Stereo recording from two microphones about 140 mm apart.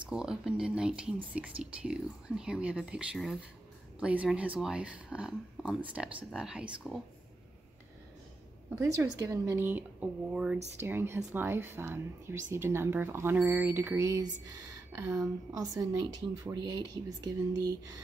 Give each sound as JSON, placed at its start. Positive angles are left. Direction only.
{"t": 0.0, "sound": "speech", "side_deg": -5}
{"t": 8.8, "sound": "speech", "side_deg": -25}